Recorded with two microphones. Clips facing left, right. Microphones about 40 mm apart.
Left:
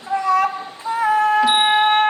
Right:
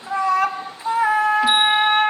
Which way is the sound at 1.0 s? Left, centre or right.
Centre.